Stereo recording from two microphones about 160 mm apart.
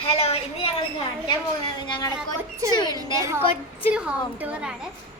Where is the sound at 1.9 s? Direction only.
25° left (ahead or behind).